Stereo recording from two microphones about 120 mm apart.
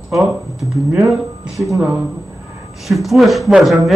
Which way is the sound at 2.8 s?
Centre (ahead or behind).